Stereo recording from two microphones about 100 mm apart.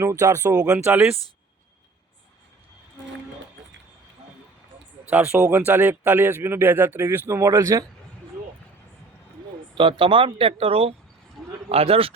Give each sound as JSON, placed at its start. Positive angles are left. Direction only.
{"t": 0.0, "sound": "speech", "side_deg": -30}
{"t": 0.4, "sound": "speech", "side_deg": -10}
{"t": 5.0, "sound": "speech", "side_deg": -15}
{"t": 9.7, "sound": "a man's voice", "side_deg": -55}